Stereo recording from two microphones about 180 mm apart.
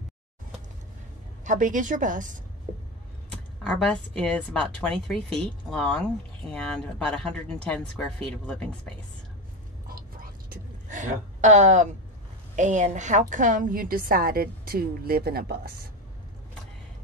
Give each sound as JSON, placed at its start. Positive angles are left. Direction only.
{"t": 1.4, "sound": "a woman's voice", "side_deg": -45}
{"t": 3.6, "sound": "a woman's voice", "side_deg": 5}
{"t": 9.8, "sound": "whispering", "side_deg": -55}
{"t": 12.5, "sound": "a woman's voice", "side_deg": -40}